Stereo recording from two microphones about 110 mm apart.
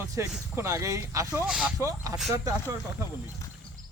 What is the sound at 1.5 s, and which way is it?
Speech, 10° right (ahead or behind).